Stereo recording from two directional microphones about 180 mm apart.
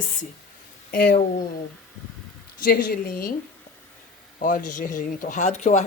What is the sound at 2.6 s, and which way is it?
Speech, 50° left (ahead or behind).